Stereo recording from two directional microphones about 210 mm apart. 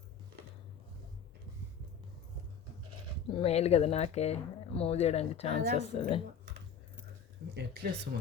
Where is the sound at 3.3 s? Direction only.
30° left (ahead or behind).